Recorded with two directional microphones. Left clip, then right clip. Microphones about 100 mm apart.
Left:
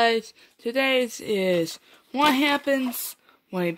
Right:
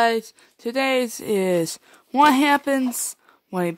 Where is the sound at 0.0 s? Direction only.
35° right (ahead or behind).